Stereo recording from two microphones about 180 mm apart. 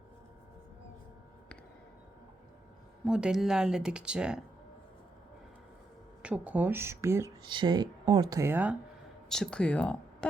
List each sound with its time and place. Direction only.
3.1 s speech: 5° right (ahead or behind)
6.2 s speech: 5° right (ahead or behind)
9.3 s speech: 5° left (ahead or behind)